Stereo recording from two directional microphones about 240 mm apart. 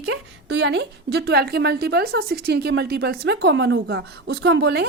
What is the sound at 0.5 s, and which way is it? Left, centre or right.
Speech, right.